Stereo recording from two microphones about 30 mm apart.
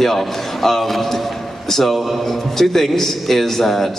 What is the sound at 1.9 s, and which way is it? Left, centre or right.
Speech, centre.